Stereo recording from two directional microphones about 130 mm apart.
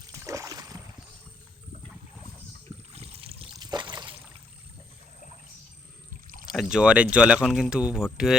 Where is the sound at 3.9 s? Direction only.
35° right (ahead or behind).